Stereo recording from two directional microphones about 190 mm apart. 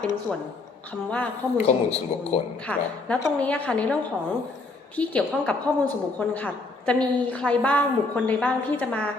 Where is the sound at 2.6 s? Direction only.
5° left (ahead or behind).